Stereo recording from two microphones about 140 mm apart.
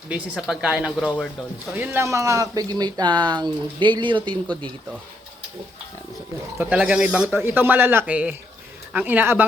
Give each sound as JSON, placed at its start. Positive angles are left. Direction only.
{"t": 0.1, "sound": "speech", "side_deg": -5}
{"t": 6.6, "sound": "speech", "side_deg": -10}